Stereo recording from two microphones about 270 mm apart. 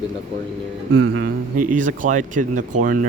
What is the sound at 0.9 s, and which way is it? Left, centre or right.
Speech, right.